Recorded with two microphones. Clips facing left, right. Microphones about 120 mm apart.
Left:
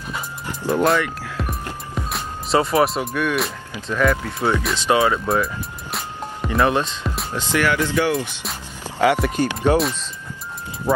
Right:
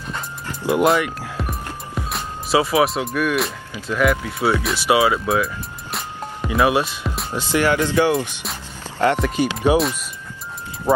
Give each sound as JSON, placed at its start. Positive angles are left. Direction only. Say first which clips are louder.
{"t": 0.9, "sound": "speech", "louder": "right 1 dB", "side_deg": -15}
{"t": 1.4, "sound": "music", "louder": "left 1 dB", "side_deg": 0}
{"t": 3.8, "sound": "speech", "louder": "right 1 dB", "side_deg": -5}
{"t": 8.8, "sound": "speech", "louder": "left 1 dB", "side_deg": 10}
{"t": 9.4, "sound": "speech", "louder": "right 3 dB", "side_deg": -10}